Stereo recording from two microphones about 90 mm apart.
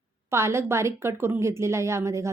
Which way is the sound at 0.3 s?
30° right (ahead or behind).